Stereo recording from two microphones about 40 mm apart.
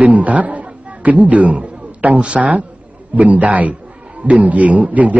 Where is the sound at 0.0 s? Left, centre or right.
Right.